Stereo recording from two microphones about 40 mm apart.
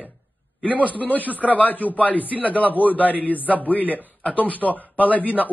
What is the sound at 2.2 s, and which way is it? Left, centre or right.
Speech, right.